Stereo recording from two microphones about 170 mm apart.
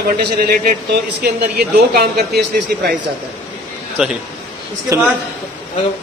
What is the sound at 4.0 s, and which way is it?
Speech, 5° right (ahead or behind).